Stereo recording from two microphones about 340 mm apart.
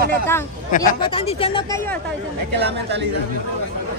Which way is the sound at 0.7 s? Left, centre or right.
Centre.